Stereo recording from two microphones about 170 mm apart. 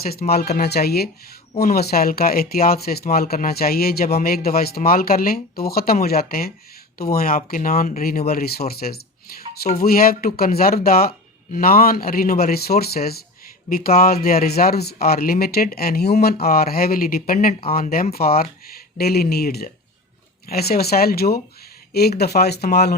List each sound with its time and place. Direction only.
0.0 s speech: 65° left (ahead or behind)
18.1 s speech: 65° left (ahead or behind)